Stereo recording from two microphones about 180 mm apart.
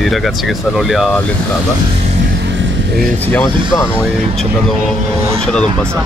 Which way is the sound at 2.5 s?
80° right.